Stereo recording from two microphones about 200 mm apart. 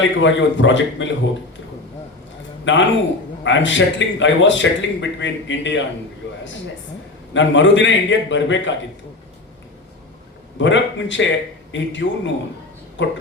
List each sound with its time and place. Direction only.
0.0 s a man's voice: 65° left (ahead or behind)
2.7 s a man's voice: 65° left (ahead or behind)
7.3 s a man's voice: 65° left (ahead or behind)
10.6 s a man's voice: 65° left (ahead or behind)